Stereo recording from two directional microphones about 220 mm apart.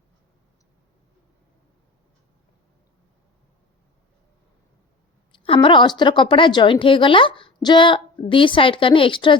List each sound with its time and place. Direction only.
5.3 s a woman's voice: 25° left (ahead or behind)